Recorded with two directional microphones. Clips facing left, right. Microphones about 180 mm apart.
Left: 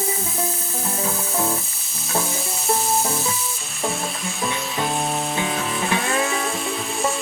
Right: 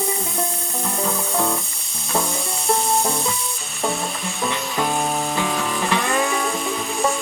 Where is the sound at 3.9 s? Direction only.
Centre (ahead or behind).